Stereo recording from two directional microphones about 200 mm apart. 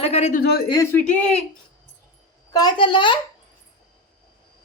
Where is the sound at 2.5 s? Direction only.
20° left (ahead or behind).